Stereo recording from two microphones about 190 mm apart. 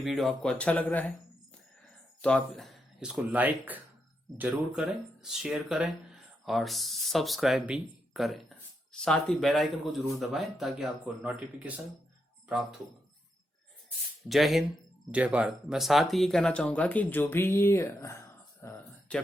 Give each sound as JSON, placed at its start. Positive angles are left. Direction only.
{"t": 0.0, "sound": "speech", "side_deg": 0}
{"t": 2.2, "sound": "speech", "side_deg": 5}
{"t": 14.3, "sound": "speech", "side_deg": 0}
{"t": 18.6, "sound": "a sound", "side_deg": 5}